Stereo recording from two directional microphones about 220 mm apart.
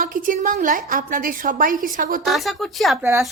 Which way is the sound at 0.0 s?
40° right (ahead or behind).